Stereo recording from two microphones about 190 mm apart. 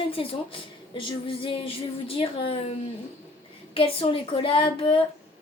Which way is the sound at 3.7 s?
30° left (ahead or behind).